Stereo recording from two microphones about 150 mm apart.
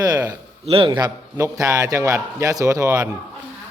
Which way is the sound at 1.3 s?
20° right (ahead or behind).